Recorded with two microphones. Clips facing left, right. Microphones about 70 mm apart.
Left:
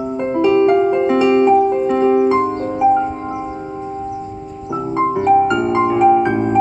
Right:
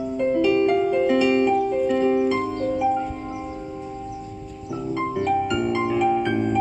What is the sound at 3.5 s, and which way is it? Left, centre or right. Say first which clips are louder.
Music: left 7 dB; left.